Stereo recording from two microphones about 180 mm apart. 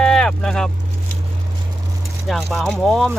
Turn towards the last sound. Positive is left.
turn(degrees=0)  # may be behind; listen again after turning